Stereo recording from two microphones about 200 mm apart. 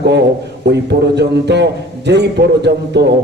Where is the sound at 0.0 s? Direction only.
60° right (ahead or behind).